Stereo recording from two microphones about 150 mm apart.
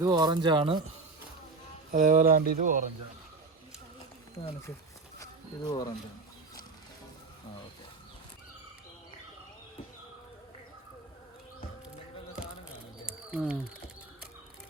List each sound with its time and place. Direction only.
0.0 s speech: 25° right (ahead or behind)
1.9 s speech: 65° right (ahead or behind)
4.4 s speech: 25° left (ahead or behind)
5.2 s insect: 30° left (ahead or behind)
13.1 s bird: 5° right (ahead or behind)